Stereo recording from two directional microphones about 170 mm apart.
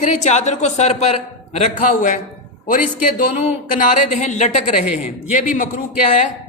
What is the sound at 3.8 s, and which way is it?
A woman's voice, 45° left (ahead or behind).